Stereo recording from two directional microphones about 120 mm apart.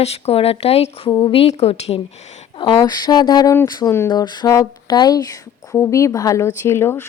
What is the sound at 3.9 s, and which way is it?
Speech, 20° left (ahead or behind).